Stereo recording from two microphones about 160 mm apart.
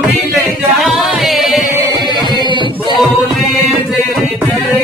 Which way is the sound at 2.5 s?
30° right (ahead or behind).